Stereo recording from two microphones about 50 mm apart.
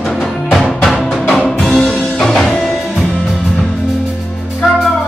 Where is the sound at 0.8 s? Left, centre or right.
Centre.